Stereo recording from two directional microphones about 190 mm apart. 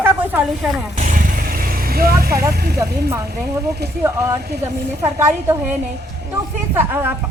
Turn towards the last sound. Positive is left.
turn(degrees=-10)  # may be behind; listen again after turning